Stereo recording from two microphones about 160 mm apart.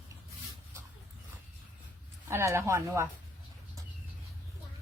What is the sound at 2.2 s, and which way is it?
Speech, 15° right (ahead or behind).